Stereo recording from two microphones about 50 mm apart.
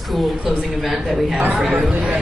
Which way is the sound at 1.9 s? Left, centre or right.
Right.